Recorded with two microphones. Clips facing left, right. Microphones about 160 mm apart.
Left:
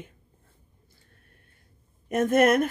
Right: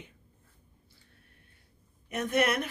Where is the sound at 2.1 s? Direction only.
45° left (ahead or behind).